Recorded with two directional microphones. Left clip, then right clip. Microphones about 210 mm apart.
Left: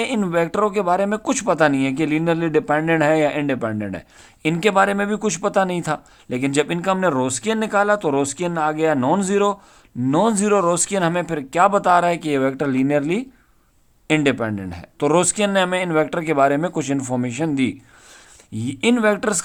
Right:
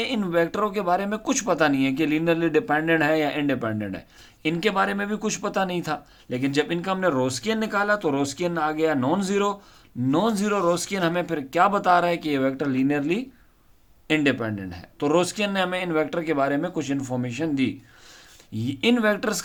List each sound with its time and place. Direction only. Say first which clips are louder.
0.0 s speech: left 3 dB; 30° left (ahead or behind)